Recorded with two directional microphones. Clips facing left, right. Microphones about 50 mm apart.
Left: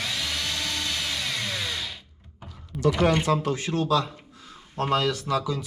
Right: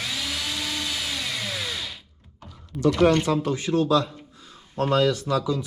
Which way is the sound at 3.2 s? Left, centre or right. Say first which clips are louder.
Right 1 dB; left.